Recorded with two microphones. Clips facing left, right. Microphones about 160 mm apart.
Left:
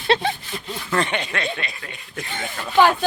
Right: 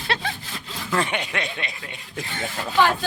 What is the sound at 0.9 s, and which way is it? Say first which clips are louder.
Speech: left 1 dB; 10° right (ahead or behind).